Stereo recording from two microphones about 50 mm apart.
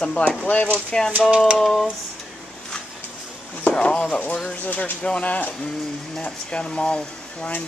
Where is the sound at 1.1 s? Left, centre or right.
Right.